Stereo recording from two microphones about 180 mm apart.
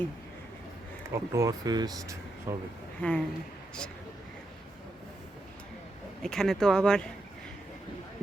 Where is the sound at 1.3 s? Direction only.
20° right (ahead or behind).